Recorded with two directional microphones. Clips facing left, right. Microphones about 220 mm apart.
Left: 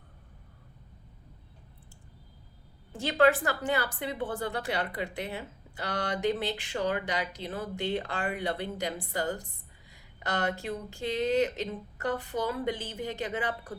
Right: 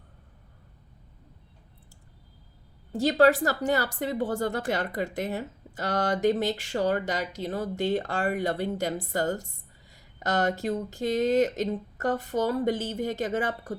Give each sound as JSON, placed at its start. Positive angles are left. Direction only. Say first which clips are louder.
{"t": 2.9, "sound": "a woman's voice", "louder": "right 4 dB", "side_deg": -40}